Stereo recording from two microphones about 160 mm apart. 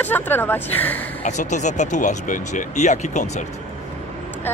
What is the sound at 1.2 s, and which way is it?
Speech, 45° left (ahead or behind).